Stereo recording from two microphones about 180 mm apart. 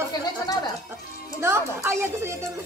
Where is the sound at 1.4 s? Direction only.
15° right (ahead or behind).